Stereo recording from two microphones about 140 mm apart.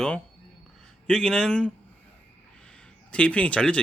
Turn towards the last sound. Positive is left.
turn(degrees=10)  # may be behind; listen again after turning